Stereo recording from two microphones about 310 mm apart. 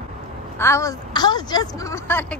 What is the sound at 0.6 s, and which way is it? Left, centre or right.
A woman's voice, centre.